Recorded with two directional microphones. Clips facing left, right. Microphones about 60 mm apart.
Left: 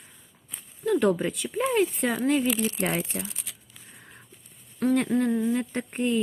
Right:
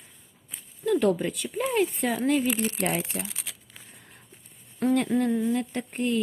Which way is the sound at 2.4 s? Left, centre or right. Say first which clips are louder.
Left 1 dB; right.